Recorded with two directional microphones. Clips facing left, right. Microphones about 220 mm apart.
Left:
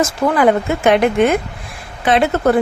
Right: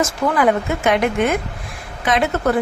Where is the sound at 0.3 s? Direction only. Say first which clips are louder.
Left 3 dB; 30° left (ahead or behind).